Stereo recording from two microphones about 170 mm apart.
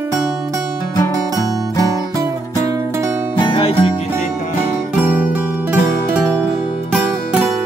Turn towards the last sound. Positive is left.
turn(degrees=-10)  # may be behind; listen again after turning